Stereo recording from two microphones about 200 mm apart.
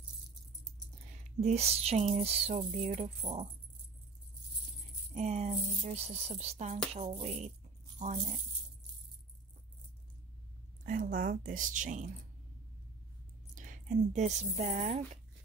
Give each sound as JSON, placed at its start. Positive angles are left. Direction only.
{"t": 1.4, "sound": "speech", "side_deg": -30}
{"t": 5.1, "sound": "speech", "side_deg": -35}
{"t": 10.9, "sound": "speech", "side_deg": -45}
{"t": 13.6, "sound": "speech", "side_deg": -40}